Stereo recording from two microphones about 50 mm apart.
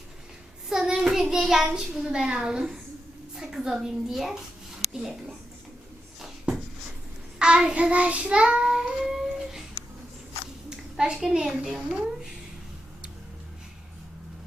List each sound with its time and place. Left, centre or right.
0.7 s a child's voice: centre
7.3 s child singing: centre
10.7 s a sound: centre
11.3 s a woman's voice: centre
11.7 s a woman's voice: centre